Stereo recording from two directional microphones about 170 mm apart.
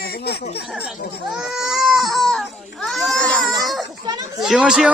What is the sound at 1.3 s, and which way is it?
Baby cry, centre (ahead or behind).